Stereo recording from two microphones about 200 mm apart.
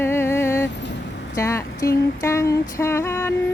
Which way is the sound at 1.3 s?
15° left (ahead or behind).